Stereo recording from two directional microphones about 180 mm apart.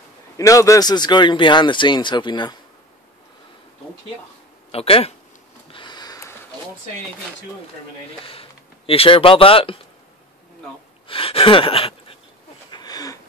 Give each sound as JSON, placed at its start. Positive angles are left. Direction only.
{"t": 0.4, "sound": "speech", "side_deg": 15}
{"t": 4.6, "sound": "speech", "side_deg": 35}
{"t": 5.7, "sound": "sniff", "side_deg": 25}
{"t": 8.3, "sound": "speech", "side_deg": 30}
{"t": 11.1, "sound": "gasp", "side_deg": 30}
{"t": 12.7, "sound": "a sound", "side_deg": 20}